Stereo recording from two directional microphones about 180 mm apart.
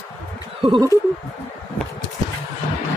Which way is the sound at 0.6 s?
25° right (ahead or behind).